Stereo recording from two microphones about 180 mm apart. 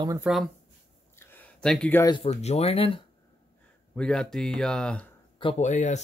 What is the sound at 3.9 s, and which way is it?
Speech, 5° left (ahead or behind).